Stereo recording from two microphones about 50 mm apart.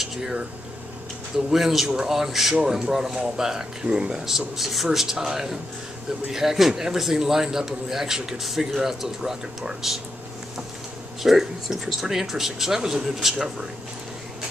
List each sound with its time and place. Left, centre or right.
0.0 s a sound: centre
1.5 s a man's voice: centre
11.2 s a man's voice: centre